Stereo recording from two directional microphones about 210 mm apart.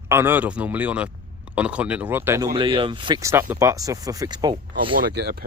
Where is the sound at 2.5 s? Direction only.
25° right (ahead or behind).